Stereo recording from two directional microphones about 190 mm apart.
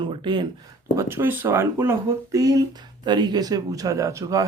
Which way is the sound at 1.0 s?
15° right (ahead or behind).